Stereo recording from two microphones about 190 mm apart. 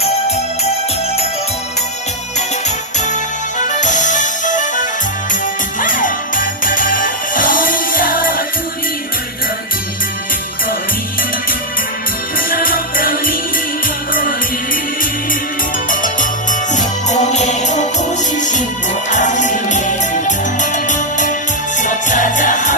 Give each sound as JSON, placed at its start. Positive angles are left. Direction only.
{"t": 3.7, "sound": "music", "side_deg": 40}
{"t": 12.4, "sound": "music", "side_deg": 50}
{"t": 15.9, "sound": "music", "side_deg": 45}